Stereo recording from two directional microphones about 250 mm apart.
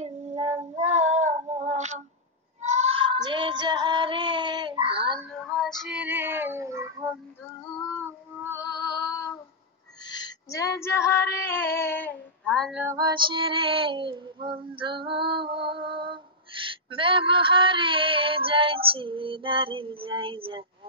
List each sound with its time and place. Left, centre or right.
0.0 s female singing: right
2.6 s child singing: right
5.2 s female singing: centre
8.5 s music: centre
10.1 s a sound: centre
10.8 s female singing: centre
12.8 s female singing: centre
15.4 s music: right
15.7 s a sound: centre
16.9 s female singing: right